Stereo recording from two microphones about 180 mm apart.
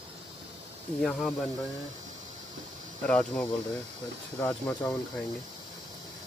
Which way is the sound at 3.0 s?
5° left (ahead or behind).